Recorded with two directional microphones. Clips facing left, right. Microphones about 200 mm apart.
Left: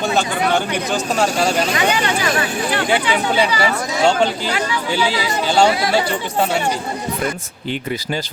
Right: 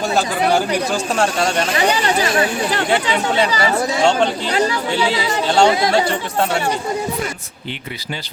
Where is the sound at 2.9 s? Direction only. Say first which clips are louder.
Left 1 dB; centre (ahead or behind).